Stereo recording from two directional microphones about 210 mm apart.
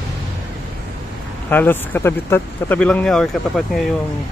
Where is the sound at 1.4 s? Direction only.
10° left (ahead or behind).